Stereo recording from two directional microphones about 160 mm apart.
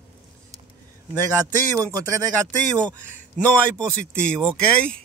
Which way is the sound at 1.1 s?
20° right (ahead or behind).